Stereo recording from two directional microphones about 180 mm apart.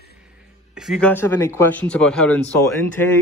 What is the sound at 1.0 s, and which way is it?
Speech, 10° left (ahead or behind).